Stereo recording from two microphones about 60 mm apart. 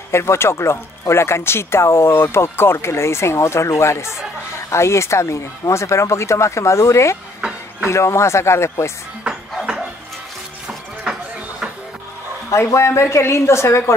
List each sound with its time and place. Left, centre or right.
0.1 s speech: left
9.2 s music: centre
12.4 s speech: left